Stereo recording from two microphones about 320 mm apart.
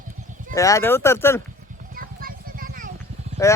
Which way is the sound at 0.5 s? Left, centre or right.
Centre.